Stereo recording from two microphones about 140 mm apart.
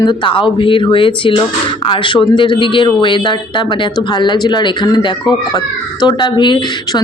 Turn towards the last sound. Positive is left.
turn(degrees=35)  # may be behind; listen again after turning